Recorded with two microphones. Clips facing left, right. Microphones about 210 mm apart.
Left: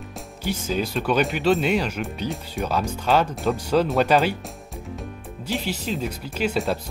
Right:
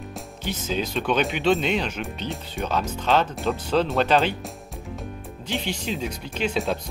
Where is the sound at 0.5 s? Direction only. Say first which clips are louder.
Left 2 dB; 10° left (ahead or behind).